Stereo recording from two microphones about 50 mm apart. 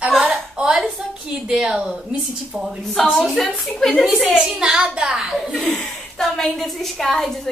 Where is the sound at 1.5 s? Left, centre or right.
Centre.